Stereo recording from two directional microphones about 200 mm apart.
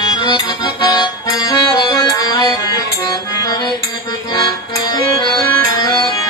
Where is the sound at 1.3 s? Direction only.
15° left (ahead or behind).